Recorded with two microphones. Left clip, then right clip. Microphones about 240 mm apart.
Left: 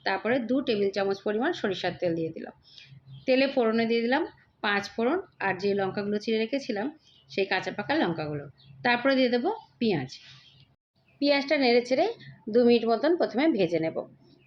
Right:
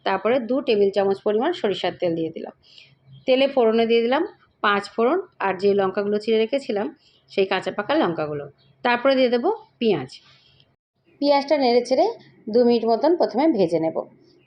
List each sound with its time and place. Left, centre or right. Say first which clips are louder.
0.0 s a woman's voice: right 6 dB; centre
11.2 s a woman's voice: right 6 dB; centre